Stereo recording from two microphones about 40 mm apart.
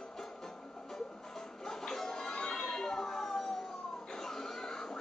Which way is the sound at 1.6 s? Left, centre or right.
Centre.